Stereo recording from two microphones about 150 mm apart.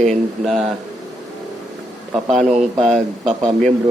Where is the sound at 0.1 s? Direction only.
Centre (ahead or behind).